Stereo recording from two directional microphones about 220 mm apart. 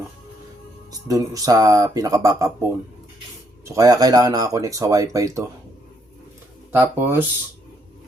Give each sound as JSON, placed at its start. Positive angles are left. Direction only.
{"t": 0.9, "sound": "speech", "side_deg": -15}
{"t": 3.7, "sound": "speech", "side_deg": -15}
{"t": 6.7, "sound": "speech", "side_deg": -10}